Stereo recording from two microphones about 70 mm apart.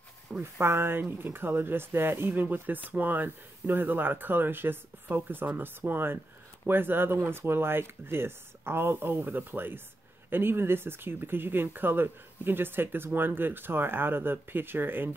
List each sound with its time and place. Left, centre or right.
0.4 s speech: right